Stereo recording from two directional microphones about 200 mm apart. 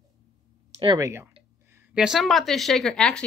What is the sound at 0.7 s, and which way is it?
Speech, 20° right (ahead or behind).